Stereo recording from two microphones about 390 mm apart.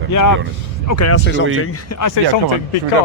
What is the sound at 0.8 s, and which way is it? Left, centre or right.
Speech, left.